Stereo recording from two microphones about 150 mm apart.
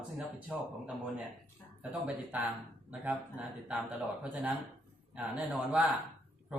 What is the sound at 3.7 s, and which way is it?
Speech, 10° right (ahead or behind).